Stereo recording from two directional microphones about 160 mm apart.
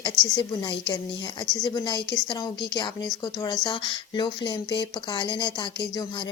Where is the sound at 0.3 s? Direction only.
30° left (ahead or behind).